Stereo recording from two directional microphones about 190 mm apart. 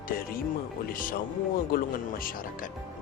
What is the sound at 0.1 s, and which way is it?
Speech, 50° left (ahead or behind).